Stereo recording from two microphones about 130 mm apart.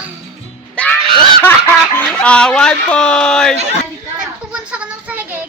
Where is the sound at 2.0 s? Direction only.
10° left (ahead or behind).